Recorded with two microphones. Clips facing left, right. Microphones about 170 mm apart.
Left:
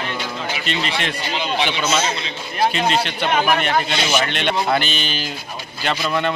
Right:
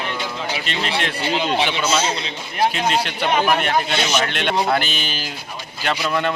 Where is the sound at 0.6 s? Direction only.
Centre (ahead or behind).